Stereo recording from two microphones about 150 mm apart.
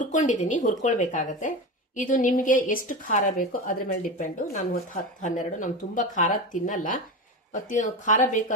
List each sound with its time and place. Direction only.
0.0 s a woman's voice: 55° left (ahead or behind)